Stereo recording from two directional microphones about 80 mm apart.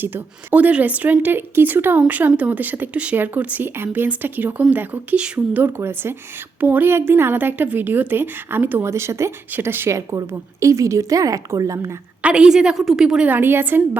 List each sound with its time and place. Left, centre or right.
0.0 s speech: right
5.6 s speech: right
8.9 s a woman's voice: right
9.5 s a woman's voice: right
12.2 s a woman's voice: centre
13.2 s speech: right